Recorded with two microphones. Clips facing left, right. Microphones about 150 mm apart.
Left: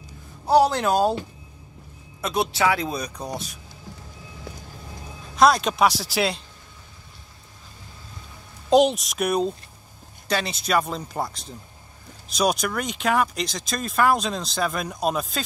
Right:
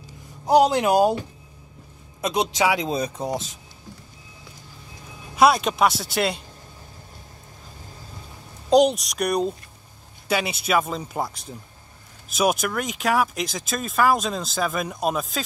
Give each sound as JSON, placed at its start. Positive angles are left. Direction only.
{"t": 0.5, "sound": "speech", "side_deg": -15}
{"t": 2.2, "sound": "speech", "side_deg": -20}
{"t": 5.3, "sound": "speech", "side_deg": -5}
{"t": 8.6, "sound": "speech", "side_deg": 0}